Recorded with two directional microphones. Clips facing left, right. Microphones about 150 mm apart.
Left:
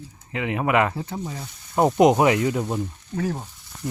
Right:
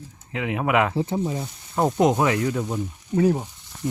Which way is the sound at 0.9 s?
25° right (ahead or behind).